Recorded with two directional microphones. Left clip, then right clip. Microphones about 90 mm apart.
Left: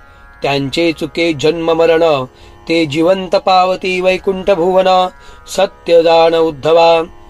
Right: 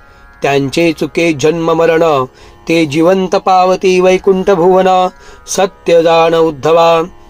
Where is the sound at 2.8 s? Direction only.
55° right (ahead or behind).